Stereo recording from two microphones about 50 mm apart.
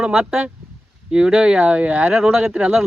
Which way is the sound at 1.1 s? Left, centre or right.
Centre.